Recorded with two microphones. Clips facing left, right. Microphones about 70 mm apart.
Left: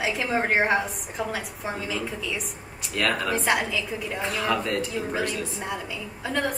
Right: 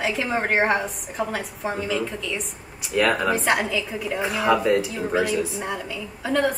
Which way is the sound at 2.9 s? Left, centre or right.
Centre.